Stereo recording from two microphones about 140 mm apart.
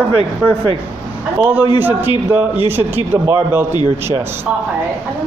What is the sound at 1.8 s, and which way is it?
A man's voice, 15° right (ahead or behind).